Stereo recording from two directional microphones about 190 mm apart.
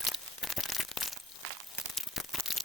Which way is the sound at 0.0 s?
Centre (ahead or behind).